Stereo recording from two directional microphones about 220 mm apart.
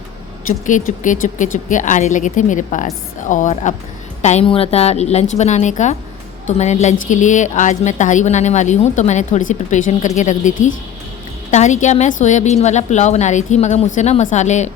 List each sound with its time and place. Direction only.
0.4 s a woman's voice: 35° left (ahead or behind)